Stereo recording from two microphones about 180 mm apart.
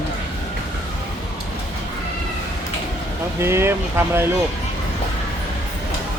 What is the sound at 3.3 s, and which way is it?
Speech, 15° right (ahead or behind).